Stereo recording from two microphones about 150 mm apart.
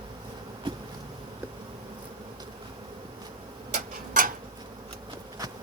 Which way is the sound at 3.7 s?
65° right (ahead or behind).